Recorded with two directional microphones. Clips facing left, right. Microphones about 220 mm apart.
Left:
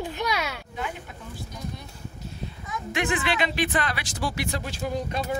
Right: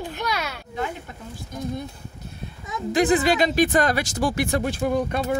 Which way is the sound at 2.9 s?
40° right (ahead or behind).